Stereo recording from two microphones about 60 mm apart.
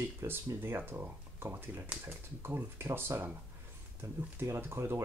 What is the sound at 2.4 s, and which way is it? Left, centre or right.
Speech, right.